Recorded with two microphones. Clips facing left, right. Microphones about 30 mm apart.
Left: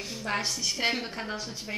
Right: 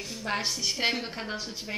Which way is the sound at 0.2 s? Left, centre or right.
Centre.